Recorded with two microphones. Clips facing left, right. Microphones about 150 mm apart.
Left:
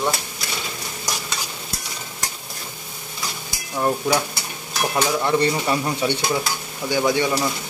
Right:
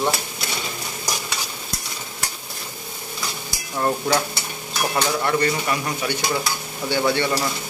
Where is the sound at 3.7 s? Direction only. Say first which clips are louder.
Left 1 dB; 5° left (ahead or behind).